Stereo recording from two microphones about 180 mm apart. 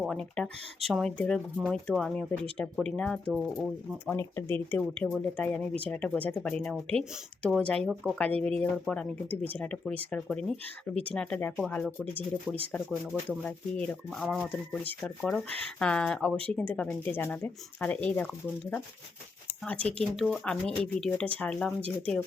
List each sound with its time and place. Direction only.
0.0 s speech: 5° left (ahead or behind)